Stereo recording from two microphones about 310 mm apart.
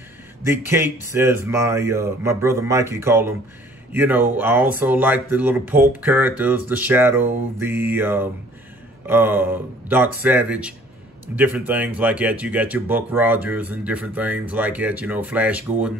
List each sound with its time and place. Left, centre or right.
0.4 s speech: centre